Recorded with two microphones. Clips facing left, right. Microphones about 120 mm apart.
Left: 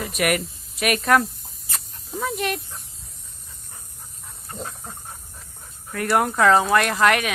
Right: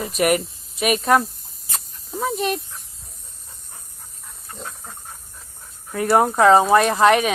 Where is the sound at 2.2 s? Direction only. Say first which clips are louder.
Right 3 dB; 25° right (ahead or behind).